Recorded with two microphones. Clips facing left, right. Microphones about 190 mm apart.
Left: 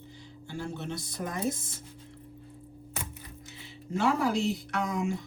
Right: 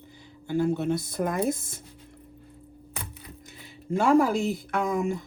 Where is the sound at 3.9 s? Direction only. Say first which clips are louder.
Right 6 dB; 50° right (ahead or behind).